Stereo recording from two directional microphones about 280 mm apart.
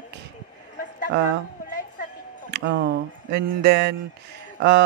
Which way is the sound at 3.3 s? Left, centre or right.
Right.